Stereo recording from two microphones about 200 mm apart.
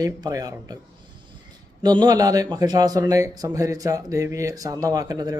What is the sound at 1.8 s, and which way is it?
A man's voice, 20° right (ahead or behind).